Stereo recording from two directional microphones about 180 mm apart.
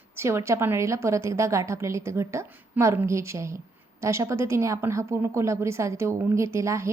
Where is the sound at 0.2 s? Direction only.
15° right (ahead or behind).